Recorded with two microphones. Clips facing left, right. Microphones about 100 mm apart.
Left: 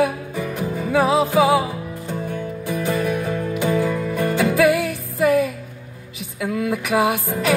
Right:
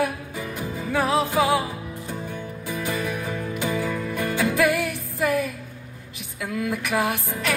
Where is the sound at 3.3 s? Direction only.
5° left (ahead or behind).